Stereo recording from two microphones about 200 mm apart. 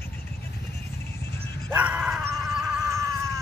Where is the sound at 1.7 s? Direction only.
5° right (ahead or behind).